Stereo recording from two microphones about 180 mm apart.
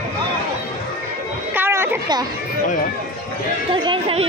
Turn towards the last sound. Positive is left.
turn(degrees=-30)  # may be behind; listen again after turning